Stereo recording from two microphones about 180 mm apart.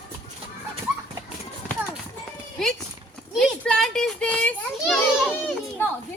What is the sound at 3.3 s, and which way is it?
Children playing, 5° left (ahead or behind).